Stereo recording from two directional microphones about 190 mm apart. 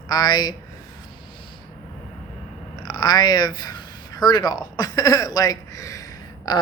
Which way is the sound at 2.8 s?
20° left (ahead or behind).